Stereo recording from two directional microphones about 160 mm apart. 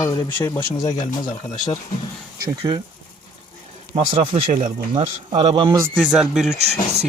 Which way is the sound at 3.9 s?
45° right (ahead or behind).